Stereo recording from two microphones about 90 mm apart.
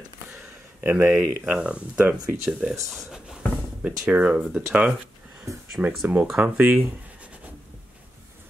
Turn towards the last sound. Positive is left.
turn(degrees=-15)  # may be behind; listen again after turning